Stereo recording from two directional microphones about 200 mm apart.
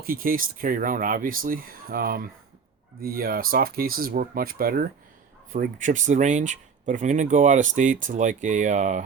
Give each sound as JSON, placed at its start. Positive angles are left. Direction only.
{"t": 0.0, "sound": "speech", "side_deg": -45}